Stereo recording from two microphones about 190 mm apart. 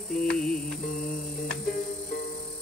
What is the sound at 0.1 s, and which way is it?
Music, 5° left (ahead or behind).